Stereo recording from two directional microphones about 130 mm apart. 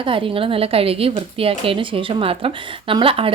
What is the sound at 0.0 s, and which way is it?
A woman's voice, 45° right (ahead or behind).